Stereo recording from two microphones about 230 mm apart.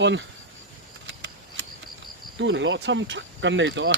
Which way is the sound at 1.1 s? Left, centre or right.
Right.